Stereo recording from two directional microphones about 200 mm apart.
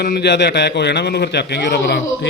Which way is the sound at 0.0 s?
55° left (ahead or behind).